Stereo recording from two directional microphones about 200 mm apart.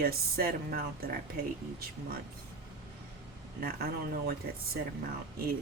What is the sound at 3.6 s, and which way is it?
Speech, 50° right (ahead or behind).